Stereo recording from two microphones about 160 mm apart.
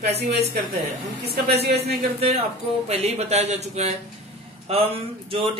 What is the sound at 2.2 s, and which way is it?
Speech, 40° right (ahead or behind).